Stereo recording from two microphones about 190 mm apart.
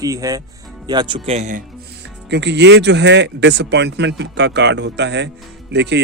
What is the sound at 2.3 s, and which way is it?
Speech, 65° right (ahead or behind).